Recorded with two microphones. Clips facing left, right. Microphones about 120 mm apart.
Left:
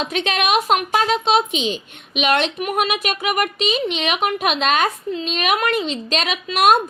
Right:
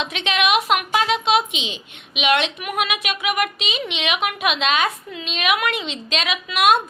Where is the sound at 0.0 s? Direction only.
40° left (ahead or behind).